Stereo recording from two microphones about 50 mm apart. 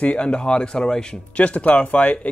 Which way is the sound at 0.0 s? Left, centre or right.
Left.